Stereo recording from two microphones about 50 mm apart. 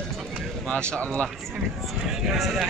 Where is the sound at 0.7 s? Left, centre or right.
Left.